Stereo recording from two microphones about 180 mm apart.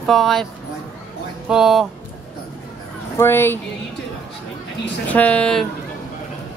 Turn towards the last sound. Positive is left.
turn(degrees=5)  # may be behind; listen again after turning